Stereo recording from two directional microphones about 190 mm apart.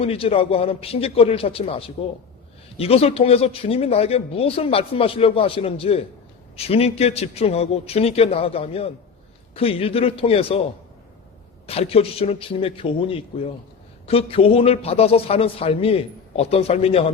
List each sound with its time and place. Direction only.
0.0 s speech: 30° left (ahead or behind)